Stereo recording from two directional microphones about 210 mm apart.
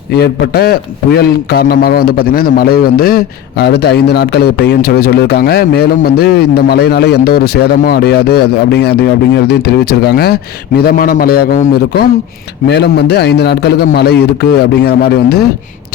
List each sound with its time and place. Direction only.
0.1 s a man's voice: 50° left (ahead or behind)